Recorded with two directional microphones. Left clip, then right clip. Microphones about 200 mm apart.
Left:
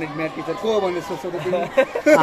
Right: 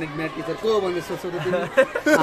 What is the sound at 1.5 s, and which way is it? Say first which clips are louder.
Speech: even; 35° right (ahead or behind).